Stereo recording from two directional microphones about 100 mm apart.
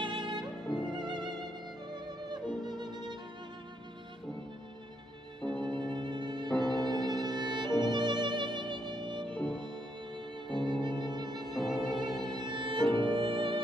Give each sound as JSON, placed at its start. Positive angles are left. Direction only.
{"t": 0.0, "sound": "violin", "side_deg": -55}
{"t": 0.9, "sound": "music", "side_deg": -50}
{"t": 2.6, "sound": "violin", "side_deg": -45}
{"t": 5.4, "sound": "violin", "side_deg": 5}
{"t": 5.7, "sound": "violin", "side_deg": -50}
{"t": 10.5, "sound": "music", "side_deg": -50}
{"t": 11.5, "sound": "violin", "side_deg": 0}
{"t": 12.2, "sound": "music", "side_deg": -50}